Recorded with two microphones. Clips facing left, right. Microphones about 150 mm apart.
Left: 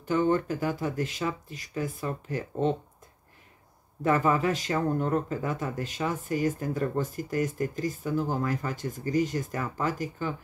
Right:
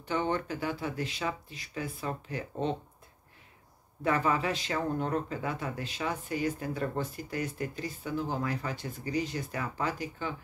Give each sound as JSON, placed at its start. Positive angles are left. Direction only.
{"t": 0.0, "sound": "speech", "side_deg": 45}
{"t": 4.0, "sound": "speech", "side_deg": 45}